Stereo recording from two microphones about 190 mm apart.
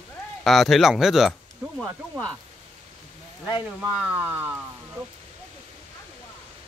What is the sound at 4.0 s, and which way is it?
Speech, 10° right (ahead or behind).